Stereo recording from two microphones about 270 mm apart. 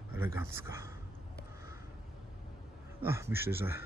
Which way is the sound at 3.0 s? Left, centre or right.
Centre.